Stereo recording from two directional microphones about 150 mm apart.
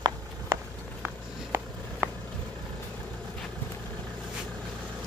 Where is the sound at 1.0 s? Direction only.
10° right (ahead or behind).